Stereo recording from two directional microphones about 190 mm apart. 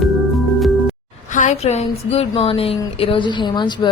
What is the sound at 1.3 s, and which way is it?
A woman's voice, 40° left (ahead or behind).